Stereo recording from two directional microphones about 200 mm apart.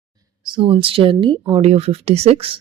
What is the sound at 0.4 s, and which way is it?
A woman's voice, 25° right (ahead or behind).